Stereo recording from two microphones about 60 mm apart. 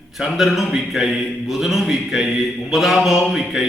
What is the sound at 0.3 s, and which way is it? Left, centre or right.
Speech, centre.